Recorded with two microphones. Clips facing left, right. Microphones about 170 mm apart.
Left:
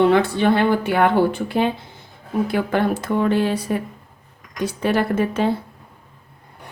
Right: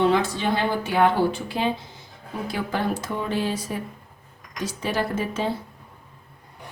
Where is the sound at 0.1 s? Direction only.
60° left (ahead or behind).